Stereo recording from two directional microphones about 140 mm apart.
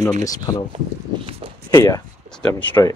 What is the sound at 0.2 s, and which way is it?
Speech, 25° left (ahead or behind).